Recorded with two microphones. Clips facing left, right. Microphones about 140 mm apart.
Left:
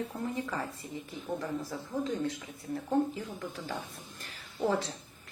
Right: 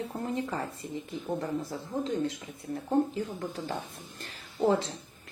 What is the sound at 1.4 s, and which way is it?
Speech, 45° right (ahead or behind).